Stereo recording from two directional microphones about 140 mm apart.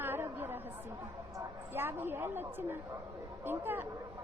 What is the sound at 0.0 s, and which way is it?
Chatter, 15° right (ahead or behind).